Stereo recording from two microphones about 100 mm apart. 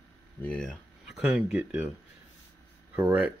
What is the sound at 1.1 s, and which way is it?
Speech, 5° right (ahead or behind).